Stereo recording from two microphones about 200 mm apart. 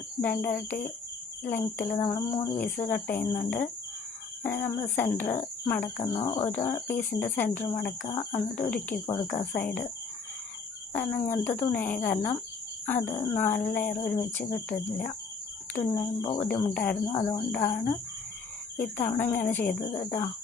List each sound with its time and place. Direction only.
0.2 s speech: 10° left (ahead or behind)
6.1 s speech: 25° left (ahead or behind)
6.4 s speech: 10° left (ahead or behind)
9.4 s speech: 10° left (ahead or behind)
10.9 s speech: 10° left (ahead or behind)